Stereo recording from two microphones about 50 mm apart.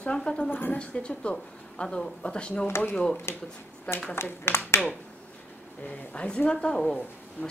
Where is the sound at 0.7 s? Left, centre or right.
Left.